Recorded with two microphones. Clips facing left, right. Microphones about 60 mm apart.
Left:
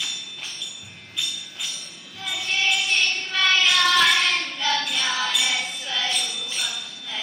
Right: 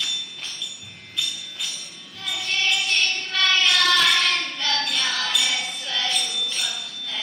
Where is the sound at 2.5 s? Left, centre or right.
Centre.